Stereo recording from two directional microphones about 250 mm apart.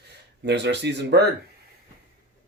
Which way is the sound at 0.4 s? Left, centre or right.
Right.